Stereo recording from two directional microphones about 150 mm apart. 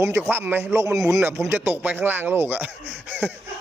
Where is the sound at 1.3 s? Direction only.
10° right (ahead or behind).